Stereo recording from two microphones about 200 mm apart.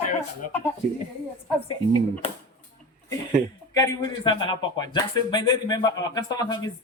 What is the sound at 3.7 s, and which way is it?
A man's voice, 20° left (ahead or behind).